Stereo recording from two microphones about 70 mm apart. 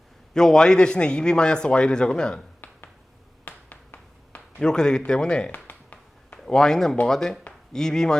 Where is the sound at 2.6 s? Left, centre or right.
Left.